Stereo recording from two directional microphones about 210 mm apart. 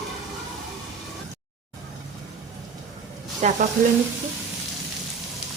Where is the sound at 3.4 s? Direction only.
35° right (ahead or behind).